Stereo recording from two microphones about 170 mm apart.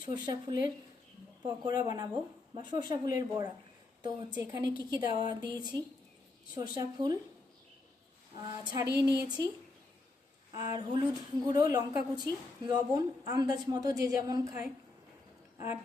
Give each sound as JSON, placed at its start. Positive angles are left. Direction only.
{"t": 0.1, "sound": "speech", "side_deg": -25}
{"t": 8.4, "sound": "speech", "side_deg": -25}
{"t": 10.5, "sound": "speech", "side_deg": -25}
{"t": 15.5, "sound": "a sound", "side_deg": -15}